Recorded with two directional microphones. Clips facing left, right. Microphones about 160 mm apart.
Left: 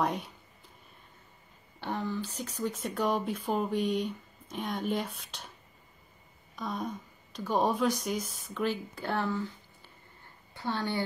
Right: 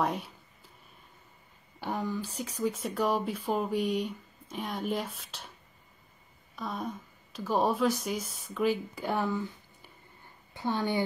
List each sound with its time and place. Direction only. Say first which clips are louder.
0.0 s speech: even; centre (ahead or behind)
1.8 s speech: right 1 dB; 10° right (ahead or behind)
6.5 s speech: left 1 dB; centre (ahead or behind)